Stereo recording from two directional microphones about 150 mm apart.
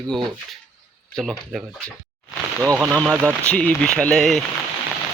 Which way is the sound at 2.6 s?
15° right (ahead or behind).